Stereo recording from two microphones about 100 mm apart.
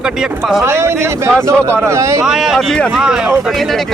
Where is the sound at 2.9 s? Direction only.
5° right (ahead or behind).